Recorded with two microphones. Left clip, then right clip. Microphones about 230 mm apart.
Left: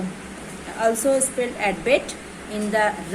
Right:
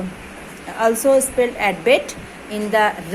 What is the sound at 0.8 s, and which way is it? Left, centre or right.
Speech, right.